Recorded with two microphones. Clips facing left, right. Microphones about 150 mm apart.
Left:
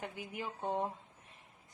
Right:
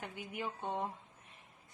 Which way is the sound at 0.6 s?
35° left (ahead or behind).